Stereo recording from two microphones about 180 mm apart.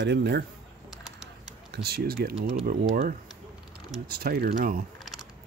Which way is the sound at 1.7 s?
60° right (ahead or behind).